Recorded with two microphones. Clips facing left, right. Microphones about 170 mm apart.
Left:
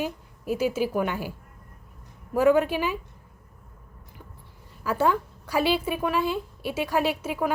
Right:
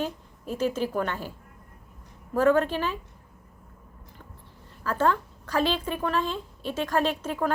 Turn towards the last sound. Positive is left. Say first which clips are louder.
# left 1 dB
turn(degrees=10)  # may be behind; listen again after turning